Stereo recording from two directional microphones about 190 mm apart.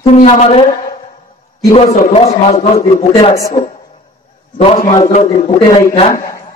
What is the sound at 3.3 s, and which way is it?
Speech, 15° left (ahead or behind).